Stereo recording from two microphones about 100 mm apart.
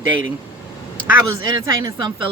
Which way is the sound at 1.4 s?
45° right (ahead or behind).